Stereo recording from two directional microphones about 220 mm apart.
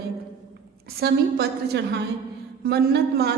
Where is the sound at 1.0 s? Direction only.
45° right (ahead or behind).